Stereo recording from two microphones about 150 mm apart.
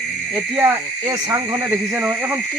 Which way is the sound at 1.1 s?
20° right (ahead or behind).